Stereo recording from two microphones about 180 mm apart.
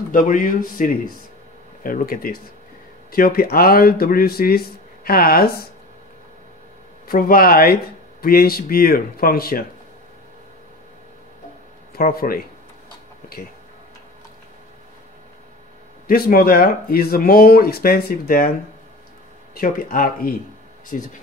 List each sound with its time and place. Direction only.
0.1 s speech: 50° left (ahead or behind)
7.1 s speech: 55° left (ahead or behind)
11.9 s speech: 55° left (ahead or behind)
16.1 s speech: 55° left (ahead or behind)
19.5 s speech: 55° left (ahead or behind)